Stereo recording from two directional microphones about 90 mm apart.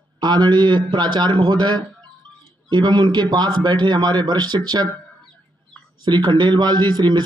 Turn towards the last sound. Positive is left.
turn(degrees=-55)  # may be behind; listen again after turning